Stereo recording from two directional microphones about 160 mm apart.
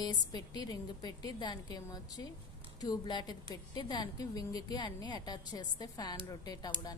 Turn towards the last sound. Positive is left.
turn(degrees=25)  # may be behind; listen again after turning